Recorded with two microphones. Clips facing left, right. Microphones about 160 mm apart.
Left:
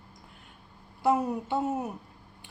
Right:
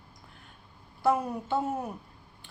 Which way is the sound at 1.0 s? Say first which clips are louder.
Left 1 dB; 20° left (ahead or behind).